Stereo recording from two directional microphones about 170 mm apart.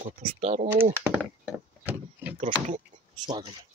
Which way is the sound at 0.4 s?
40° right (ahead or behind).